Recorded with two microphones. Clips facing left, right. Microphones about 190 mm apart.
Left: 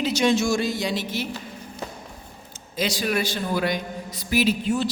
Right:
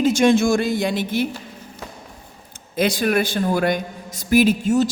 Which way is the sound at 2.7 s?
55° right (ahead or behind).